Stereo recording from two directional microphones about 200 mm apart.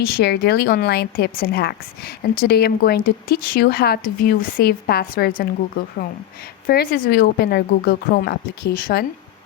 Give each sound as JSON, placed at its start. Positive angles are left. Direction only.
{"t": 0.0, "sound": "a woman's voice", "side_deg": 55}
{"t": 6.7, "sound": "a woman's voice", "side_deg": 50}